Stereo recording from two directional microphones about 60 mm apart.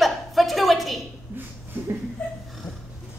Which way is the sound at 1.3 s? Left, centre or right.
Right.